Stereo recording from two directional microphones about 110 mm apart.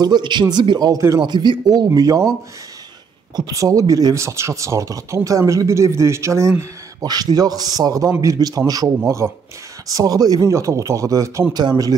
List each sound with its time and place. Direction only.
0.0 s a man's voice: 40° right (ahead or behind)
3.3 s speech: 35° right (ahead or behind)
7.0 s a man's voice: 35° right (ahead or behind)